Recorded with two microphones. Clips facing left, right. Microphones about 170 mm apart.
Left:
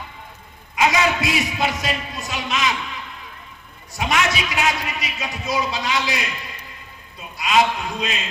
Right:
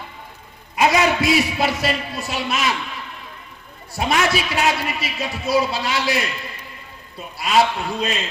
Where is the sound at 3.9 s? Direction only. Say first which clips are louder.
Right 2 dB; 30° right (ahead or behind).